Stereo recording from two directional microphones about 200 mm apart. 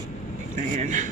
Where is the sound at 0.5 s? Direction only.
40° right (ahead or behind).